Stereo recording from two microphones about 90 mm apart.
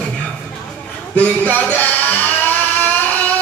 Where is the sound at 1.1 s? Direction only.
20° left (ahead or behind).